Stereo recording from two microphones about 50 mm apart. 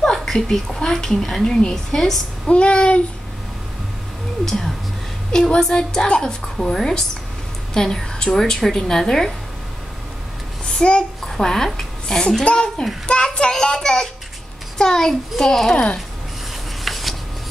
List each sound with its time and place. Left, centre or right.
0.0 s a woman's voice: centre
2.4 s child singing: left
4.5 s a woman's voice: centre
10.6 s a child's voice: centre
15.7 s child singing: left
16.8 s a sound: centre